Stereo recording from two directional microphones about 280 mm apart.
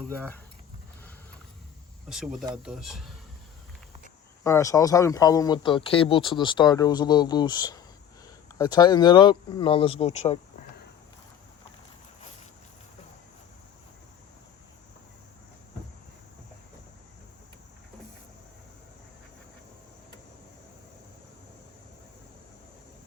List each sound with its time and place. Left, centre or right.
0.1 s speech: centre
2.0 s speech: centre
4.4 s speech: centre